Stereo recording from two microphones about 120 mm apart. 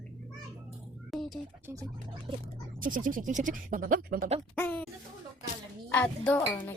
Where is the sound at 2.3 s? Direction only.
45° right (ahead or behind).